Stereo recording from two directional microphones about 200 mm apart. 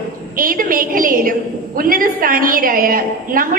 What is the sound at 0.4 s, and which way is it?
A woman's voice, 45° right (ahead or behind).